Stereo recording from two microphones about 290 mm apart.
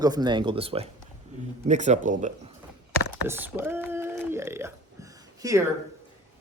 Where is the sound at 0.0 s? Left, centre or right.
Centre.